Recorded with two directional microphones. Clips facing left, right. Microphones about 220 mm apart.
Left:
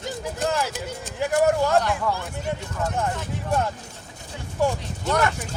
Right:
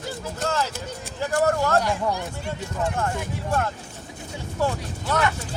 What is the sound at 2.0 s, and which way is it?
Speech, 15° right (ahead or behind).